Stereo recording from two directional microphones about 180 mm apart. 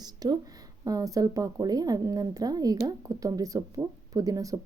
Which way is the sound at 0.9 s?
20° right (ahead or behind).